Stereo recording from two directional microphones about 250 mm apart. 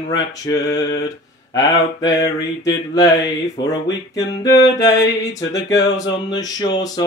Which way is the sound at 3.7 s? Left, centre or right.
Centre.